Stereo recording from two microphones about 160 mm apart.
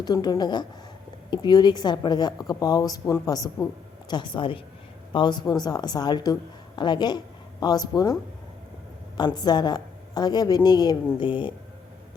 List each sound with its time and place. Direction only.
0.0 s a woman's voice: 25° left (ahead or behind)